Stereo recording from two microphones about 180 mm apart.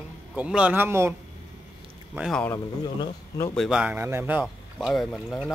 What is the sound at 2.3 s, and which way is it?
Speech, 10° left (ahead or behind).